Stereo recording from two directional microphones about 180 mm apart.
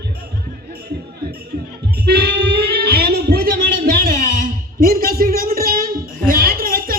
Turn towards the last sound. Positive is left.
turn(degrees=-55)  # may be behind; listen again after turning